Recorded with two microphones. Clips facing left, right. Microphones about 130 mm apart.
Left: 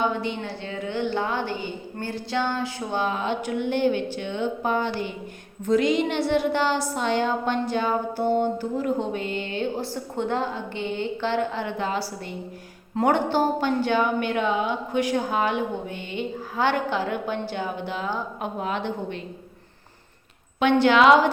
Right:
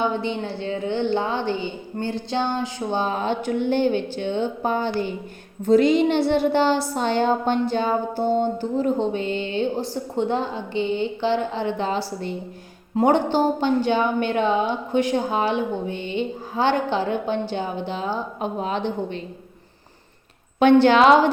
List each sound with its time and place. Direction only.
0.2 s a woman's voice: 30° right (ahead or behind)
3.0 s a woman's voice: 35° right (ahead or behind)
20.6 s a woman's voice: 35° right (ahead or behind)